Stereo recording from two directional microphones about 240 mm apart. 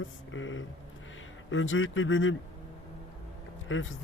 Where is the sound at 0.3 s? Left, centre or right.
Left.